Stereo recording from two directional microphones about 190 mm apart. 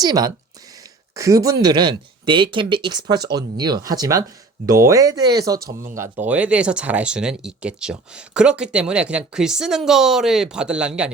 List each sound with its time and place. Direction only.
0.0 s speech: 20° right (ahead or behind)